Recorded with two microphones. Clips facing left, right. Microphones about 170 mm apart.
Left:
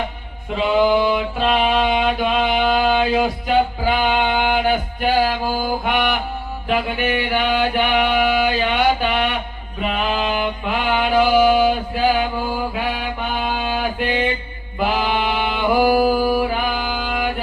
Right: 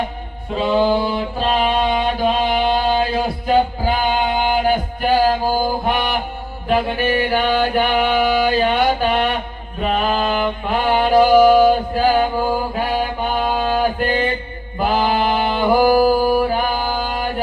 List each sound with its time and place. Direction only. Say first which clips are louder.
0.5 s a sound: even; 40° right (ahead or behind)
3.4 s music: right 1 dB; 40° right (ahead or behind)
5.8 s mantra: even; 40° right (ahead or behind)
6.7 s music: right 3 dB; 40° right (ahead or behind)
12.7 s mantra: right 4 dB; 40° right (ahead or behind)
14.8 s a sound: right 2 dB; 45° right (ahead or behind)